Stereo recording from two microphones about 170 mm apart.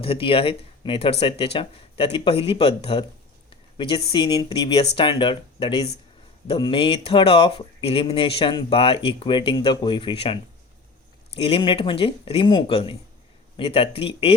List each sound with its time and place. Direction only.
0.0 s speech: 30° left (ahead or behind)
11.3 s speech: 35° left (ahead or behind)